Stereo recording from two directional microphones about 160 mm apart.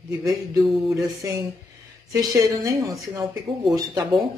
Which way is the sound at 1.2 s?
20° right (ahead or behind).